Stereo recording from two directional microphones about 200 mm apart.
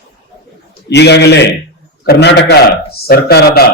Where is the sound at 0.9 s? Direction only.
60° left (ahead or behind).